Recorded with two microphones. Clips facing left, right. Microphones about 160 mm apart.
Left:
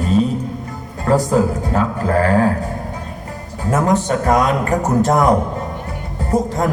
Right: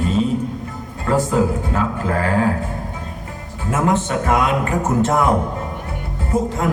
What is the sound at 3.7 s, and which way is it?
Speech, 40° left (ahead or behind).